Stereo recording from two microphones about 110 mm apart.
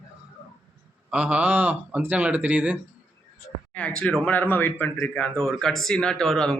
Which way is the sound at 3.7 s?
10° left (ahead or behind).